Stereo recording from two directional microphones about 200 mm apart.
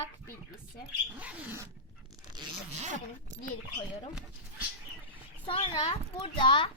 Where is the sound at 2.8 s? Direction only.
35° right (ahead or behind).